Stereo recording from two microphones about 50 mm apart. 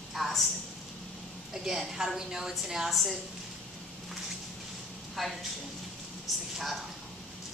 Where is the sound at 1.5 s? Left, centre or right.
Centre.